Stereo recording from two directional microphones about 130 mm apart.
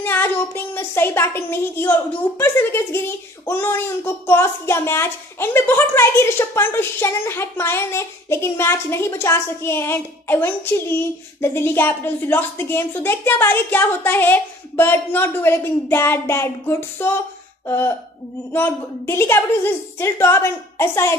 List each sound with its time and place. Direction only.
0.0 s a woman's voice: 15° left (ahead or behind)